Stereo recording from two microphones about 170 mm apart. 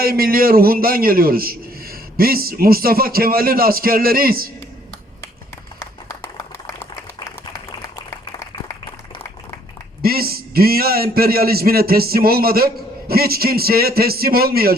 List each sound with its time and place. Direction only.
0.0 s a man's voice: 60° right (ahead or behind)
6.1 s a sound: 15° left (ahead or behind)
10.0 s a man's voice: 60° right (ahead or behind)